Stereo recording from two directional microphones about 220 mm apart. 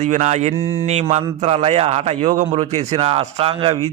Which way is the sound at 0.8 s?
30° right (ahead or behind).